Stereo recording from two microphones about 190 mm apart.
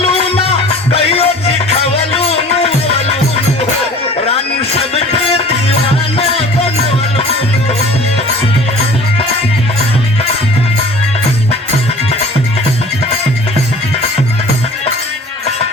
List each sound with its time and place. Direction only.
0.0 s music: 30° left (ahead or behind)